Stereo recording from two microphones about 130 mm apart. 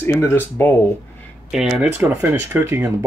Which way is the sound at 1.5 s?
5° right (ahead or behind).